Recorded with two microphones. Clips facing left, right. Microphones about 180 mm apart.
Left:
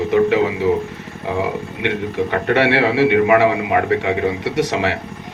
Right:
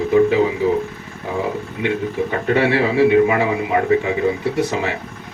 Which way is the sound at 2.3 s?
75° left (ahead or behind).